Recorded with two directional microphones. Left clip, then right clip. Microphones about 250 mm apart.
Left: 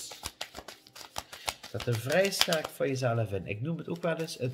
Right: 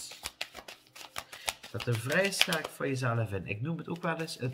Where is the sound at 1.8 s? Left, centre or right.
Centre.